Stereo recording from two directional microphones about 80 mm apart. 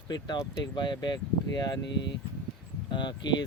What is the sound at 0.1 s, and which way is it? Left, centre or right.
Speech, left.